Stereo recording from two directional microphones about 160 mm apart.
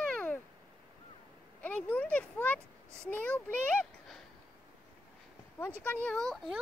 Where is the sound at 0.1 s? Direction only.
10° left (ahead or behind).